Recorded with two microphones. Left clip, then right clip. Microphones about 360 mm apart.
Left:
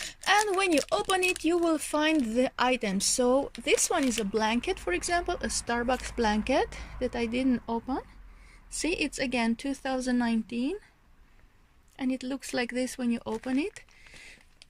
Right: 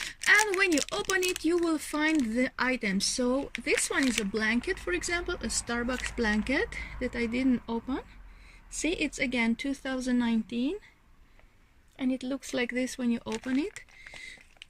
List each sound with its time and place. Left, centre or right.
0.3 s speech: centre
11.9 s speech: centre